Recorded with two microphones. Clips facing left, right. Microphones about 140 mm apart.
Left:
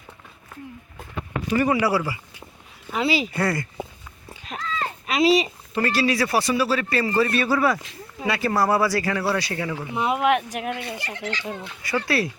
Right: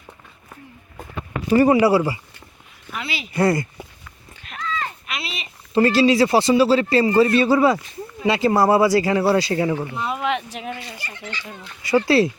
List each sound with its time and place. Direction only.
1.5 s a man's voice: 30° right (ahead or behind)
2.9 s speech: 35° left (ahead or behind)
3.3 s a man's voice: 20° right (ahead or behind)
4.4 s a sound: 35° left (ahead or behind)
5.7 s a man's voice: 25° right (ahead or behind)
9.9 s speech: 15° left (ahead or behind)
11.0 s fowl: 85° left
11.8 s a man's voice: 25° right (ahead or behind)